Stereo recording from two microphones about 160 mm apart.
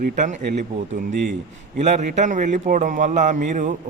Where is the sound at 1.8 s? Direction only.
45° right (ahead or behind).